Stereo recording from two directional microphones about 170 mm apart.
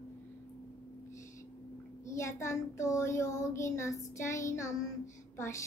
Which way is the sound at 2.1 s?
15° left (ahead or behind).